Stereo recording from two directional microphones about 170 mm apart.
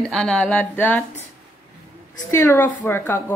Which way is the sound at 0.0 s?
5° left (ahead or behind).